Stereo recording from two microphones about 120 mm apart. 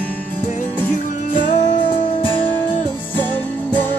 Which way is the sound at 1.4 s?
40° left (ahead or behind).